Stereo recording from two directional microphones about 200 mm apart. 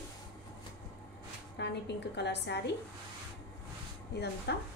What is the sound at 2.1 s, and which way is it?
Speech, 60° left (ahead or behind).